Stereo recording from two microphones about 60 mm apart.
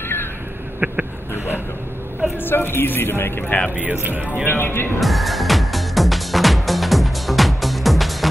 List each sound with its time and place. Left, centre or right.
2.3 s speech: left
4.0 s speech: right
4.5 s speech: left
5.0 s music: centre